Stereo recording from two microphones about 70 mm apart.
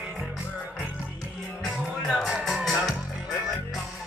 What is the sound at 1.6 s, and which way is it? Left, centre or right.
Music, centre.